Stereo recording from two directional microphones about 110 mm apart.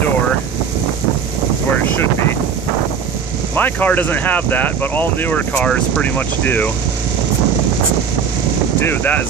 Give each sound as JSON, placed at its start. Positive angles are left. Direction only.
{"t": 1.8, "sound": "vehicle", "side_deg": 20}
{"t": 3.5, "sound": "speech", "side_deg": 15}
{"t": 8.7, "sound": "speech", "side_deg": 20}